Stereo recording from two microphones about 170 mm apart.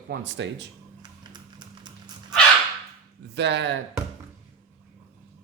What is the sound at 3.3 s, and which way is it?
Speech, 90° right.